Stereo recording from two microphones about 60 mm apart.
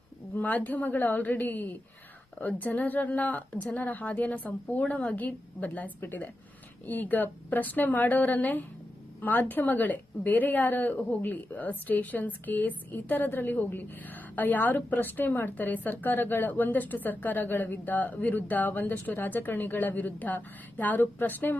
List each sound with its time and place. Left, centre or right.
0.3 s a woman's voice: left